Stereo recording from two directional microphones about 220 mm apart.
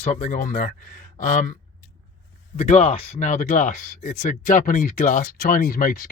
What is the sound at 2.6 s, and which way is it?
Speech, 30° left (ahead or behind).